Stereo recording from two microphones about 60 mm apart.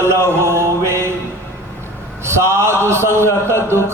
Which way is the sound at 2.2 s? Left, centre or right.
Right.